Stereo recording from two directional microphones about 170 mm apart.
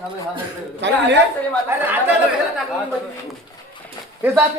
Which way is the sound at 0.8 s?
90° right.